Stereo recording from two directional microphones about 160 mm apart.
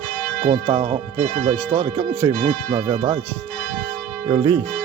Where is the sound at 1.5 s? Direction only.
10° right (ahead or behind).